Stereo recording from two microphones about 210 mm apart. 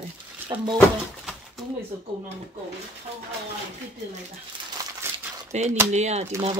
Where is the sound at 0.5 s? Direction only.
20° right (ahead or behind).